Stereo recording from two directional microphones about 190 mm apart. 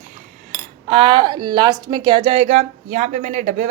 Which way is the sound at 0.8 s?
30° right (ahead or behind).